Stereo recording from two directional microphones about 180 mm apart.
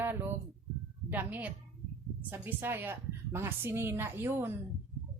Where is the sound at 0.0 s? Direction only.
10° right (ahead or behind).